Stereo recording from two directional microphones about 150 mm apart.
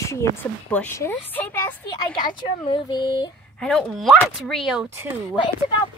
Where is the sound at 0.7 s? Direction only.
10° left (ahead or behind).